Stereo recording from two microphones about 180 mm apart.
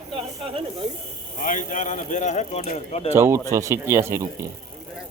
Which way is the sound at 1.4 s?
45° left (ahead or behind).